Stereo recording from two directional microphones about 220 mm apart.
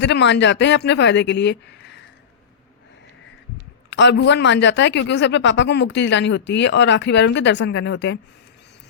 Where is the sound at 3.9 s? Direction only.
55° left (ahead or behind).